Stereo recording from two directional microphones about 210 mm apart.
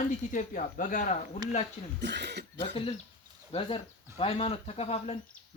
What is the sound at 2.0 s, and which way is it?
Speech, 55° right (ahead or behind).